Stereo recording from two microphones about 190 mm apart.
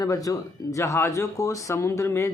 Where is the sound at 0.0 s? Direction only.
20° left (ahead or behind).